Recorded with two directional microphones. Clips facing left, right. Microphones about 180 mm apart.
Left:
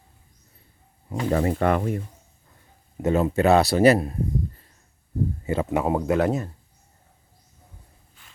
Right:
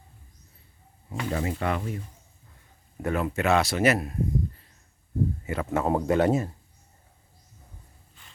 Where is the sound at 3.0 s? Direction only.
25° left (ahead or behind).